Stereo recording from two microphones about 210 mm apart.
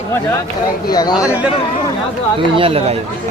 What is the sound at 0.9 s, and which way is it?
Speech, 20° left (ahead or behind).